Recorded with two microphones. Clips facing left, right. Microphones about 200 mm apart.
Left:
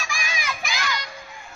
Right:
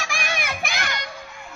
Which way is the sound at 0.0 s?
65° right (ahead or behind).